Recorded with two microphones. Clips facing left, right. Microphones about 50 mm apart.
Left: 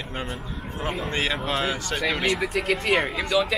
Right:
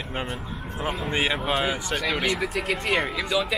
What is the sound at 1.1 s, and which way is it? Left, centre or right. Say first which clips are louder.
Speech: right 2 dB; centre.